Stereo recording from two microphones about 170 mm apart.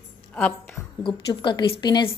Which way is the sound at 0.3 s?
10° left (ahead or behind).